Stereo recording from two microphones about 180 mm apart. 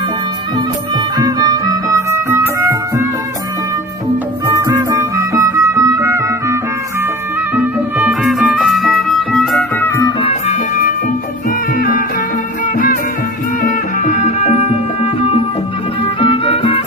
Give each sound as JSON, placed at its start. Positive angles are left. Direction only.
{"t": 1.2, "sound": "music", "side_deg": -20}
{"t": 4.5, "sound": "music", "side_deg": -20}
{"t": 11.8, "sound": "music", "side_deg": 50}
{"t": 13.7, "sound": "music", "side_deg": 45}
{"t": 16.2, "sound": "music", "side_deg": 35}